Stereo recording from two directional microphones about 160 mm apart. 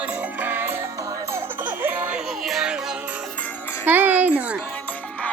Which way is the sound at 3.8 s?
10° right (ahead or behind).